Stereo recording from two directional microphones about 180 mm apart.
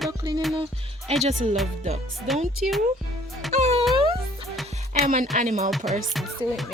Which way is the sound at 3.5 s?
35° right (ahead or behind).